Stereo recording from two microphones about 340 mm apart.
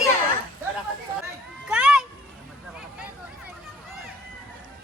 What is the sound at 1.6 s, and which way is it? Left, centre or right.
Children playing, centre.